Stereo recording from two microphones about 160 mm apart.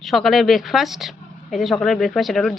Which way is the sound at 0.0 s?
Centre (ahead or behind).